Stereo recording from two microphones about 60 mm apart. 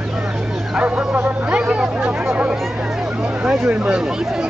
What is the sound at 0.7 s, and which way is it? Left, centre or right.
Bow-wow, right.